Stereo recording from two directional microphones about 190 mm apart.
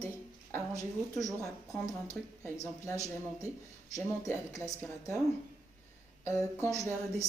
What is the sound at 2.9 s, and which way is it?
Speech, 15° right (ahead or behind).